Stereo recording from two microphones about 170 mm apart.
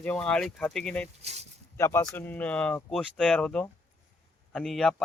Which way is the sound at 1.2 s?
40° right (ahead or behind).